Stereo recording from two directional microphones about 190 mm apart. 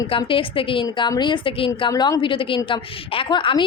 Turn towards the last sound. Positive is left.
turn(degrees=25)  # may be behind; listen again after turning